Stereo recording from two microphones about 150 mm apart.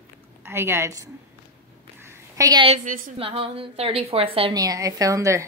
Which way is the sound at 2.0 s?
20° right (ahead or behind).